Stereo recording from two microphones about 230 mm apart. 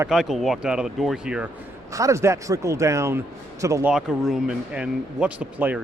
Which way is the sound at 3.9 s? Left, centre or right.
Centre.